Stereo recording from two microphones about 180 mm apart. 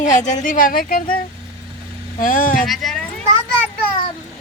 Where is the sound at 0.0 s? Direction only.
40° left (ahead or behind).